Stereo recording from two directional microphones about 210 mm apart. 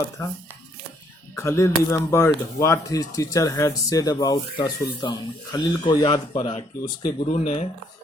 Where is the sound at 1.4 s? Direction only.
15° left (ahead or behind).